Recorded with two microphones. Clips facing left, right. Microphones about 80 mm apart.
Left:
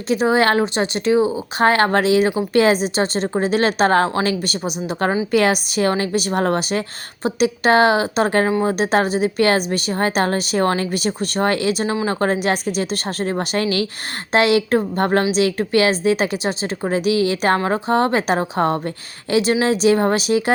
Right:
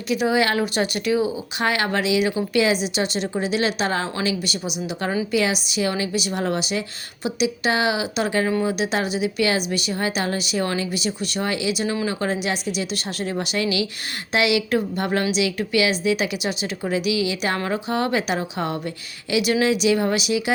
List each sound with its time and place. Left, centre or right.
0.1 s a woman's voice: left
0.6 s a woman's voice: left